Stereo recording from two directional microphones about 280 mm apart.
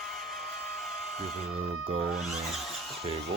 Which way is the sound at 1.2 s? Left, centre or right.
Right.